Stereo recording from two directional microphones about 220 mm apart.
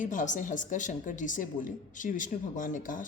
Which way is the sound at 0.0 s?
35° left (ahead or behind).